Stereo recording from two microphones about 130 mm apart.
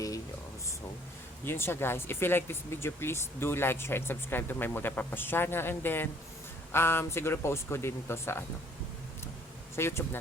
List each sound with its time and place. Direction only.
1.5 s speech: 15° left (ahead or behind)
9.7 s speech: 20° left (ahead or behind)